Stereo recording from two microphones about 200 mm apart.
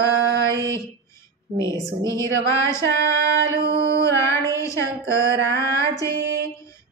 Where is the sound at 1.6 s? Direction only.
15° left (ahead or behind).